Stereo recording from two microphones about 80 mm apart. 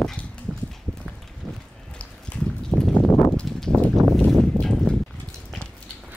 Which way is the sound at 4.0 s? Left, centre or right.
Right.